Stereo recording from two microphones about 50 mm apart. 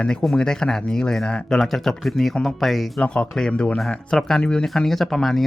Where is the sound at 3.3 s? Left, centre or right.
Centre.